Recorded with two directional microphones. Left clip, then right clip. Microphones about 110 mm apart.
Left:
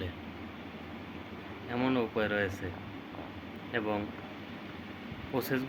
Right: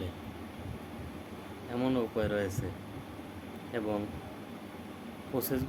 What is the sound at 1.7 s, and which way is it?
Speech, 25° right (ahead or behind).